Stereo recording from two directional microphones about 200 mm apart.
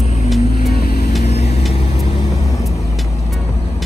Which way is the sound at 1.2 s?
35° left (ahead or behind).